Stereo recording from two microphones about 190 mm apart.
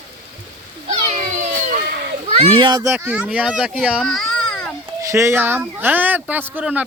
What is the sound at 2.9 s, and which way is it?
A child's voice, 10° right (ahead or behind).